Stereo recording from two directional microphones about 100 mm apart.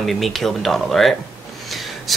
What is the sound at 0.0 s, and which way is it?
Speech, centre (ahead or behind).